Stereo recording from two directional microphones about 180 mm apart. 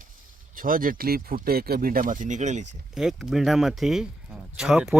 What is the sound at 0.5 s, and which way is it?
Speech, 50° right (ahead or behind).